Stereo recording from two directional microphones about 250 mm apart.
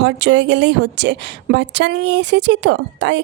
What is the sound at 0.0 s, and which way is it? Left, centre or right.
A woman's voice, right.